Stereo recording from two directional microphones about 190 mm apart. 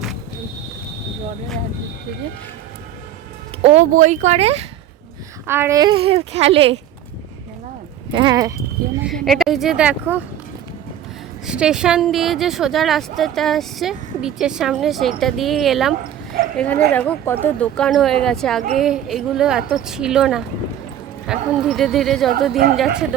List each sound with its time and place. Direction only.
3.6 s speech: 35° right (ahead or behind)
5.5 s speech: 15° right (ahead or behind); by 6.7 s 30° right (ahead or behind)
8.1 s speech: 25° right (ahead or behind)
9.0 s speech: centre (ahead or behind)
11.4 s speech: 5° right (ahead or behind)